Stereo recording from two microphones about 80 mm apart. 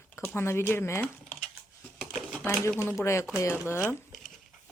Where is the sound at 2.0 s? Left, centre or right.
Centre.